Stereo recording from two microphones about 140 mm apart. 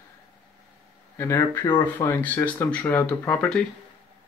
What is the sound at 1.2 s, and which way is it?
Speech, 20° left (ahead or behind).